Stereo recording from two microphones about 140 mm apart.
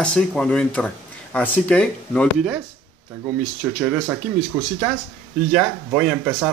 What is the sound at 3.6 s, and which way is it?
Speech, 10° right (ahead or behind).